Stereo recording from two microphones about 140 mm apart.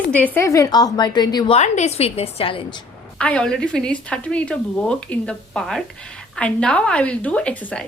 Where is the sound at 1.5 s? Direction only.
55° left (ahead or behind).